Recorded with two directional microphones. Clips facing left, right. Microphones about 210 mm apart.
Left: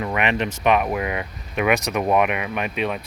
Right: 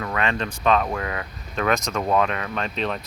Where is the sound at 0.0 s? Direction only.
20° left (ahead or behind).